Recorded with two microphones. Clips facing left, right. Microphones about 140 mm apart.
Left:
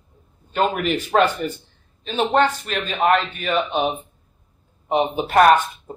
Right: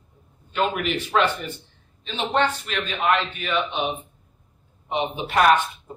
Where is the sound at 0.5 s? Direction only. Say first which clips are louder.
Left 3 dB; 40° left (ahead or behind).